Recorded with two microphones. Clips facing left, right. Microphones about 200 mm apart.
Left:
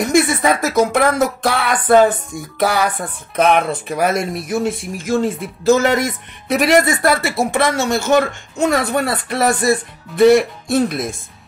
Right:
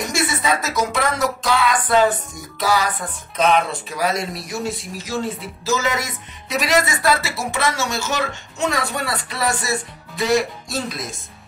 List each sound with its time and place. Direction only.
0.1 s speech: 55° left (ahead or behind)